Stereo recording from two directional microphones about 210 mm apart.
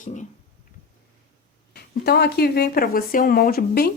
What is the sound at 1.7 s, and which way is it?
Speech, 50° left (ahead or behind).